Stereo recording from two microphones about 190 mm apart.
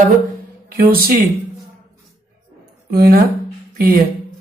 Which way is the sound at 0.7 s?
50° right (ahead or behind).